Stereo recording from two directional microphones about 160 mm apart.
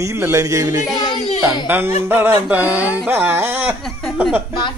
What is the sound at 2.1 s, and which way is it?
A woman's voice, 15° right (ahead or behind).